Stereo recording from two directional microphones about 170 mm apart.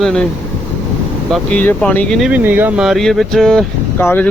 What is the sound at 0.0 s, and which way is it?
Speech, 5° left (ahead or behind).